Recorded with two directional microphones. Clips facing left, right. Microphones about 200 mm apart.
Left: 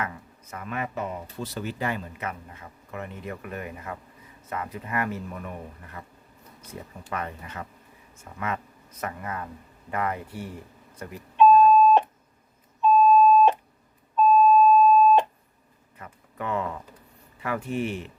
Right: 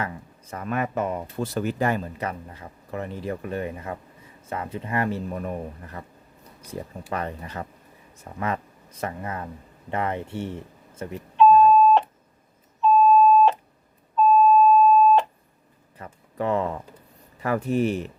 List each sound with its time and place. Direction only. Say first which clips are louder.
0.0 s speech: right 2 dB; 30° right (ahead or behind)
7.1 s speech: right 3 dB; 35° right (ahead or behind)
11.7 s beep: right 1 dB; 15° left (ahead or behind)
16.0 s a sound: right 6 dB; 35° right (ahead or behind)
17.4 s speech: right 6 dB; 40° right (ahead or behind)